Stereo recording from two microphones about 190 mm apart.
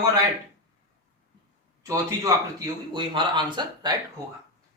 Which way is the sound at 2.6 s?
25° right (ahead or behind).